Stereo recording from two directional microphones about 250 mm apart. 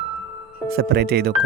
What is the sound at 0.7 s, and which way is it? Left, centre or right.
Speech, right.